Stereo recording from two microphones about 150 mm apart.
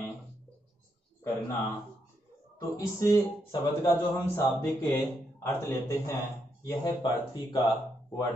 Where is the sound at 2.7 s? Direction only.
20° left (ahead or behind).